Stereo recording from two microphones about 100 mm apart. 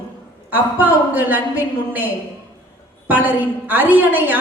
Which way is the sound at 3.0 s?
15° right (ahead or behind).